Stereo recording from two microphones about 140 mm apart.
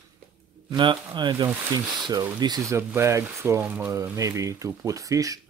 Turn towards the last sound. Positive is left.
turn(degrees=-25)  # may be behind; listen again after turning